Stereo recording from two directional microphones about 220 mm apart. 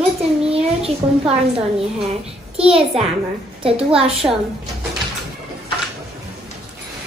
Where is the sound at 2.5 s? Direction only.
25° right (ahead or behind).